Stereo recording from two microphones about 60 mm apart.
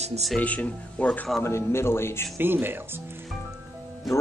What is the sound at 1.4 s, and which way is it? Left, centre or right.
Speech, left.